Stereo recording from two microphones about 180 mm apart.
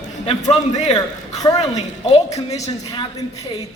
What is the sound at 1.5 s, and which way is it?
Speech, 35° left (ahead or behind).